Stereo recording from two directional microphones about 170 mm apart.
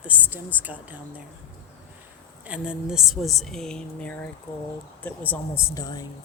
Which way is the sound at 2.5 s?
5° right (ahead or behind).